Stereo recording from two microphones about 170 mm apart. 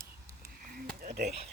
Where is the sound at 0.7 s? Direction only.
65° right (ahead or behind).